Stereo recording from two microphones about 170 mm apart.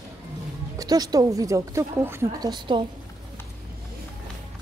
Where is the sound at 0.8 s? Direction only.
20° right (ahead or behind).